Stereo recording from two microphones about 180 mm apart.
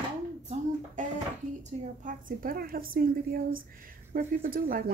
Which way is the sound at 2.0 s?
50° right (ahead or behind).